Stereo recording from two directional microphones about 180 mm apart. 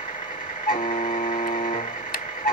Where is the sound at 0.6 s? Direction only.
50° left (ahead or behind).